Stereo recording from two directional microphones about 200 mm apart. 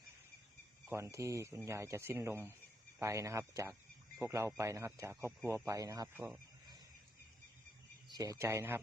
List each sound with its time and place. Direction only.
0.9 s speech: 15° right (ahead or behind)
8.1 s speech: 15° right (ahead or behind)